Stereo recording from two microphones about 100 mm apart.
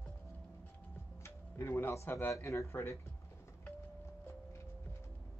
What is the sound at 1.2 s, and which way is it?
Speech, 25° left (ahead or behind).